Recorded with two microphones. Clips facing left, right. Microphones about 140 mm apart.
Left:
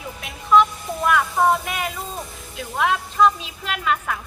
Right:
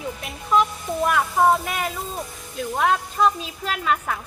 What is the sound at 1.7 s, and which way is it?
Speech, 40° right (ahead or behind).